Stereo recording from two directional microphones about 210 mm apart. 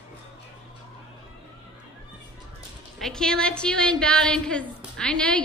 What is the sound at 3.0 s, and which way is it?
A woman's voice, 5° left (ahead or behind).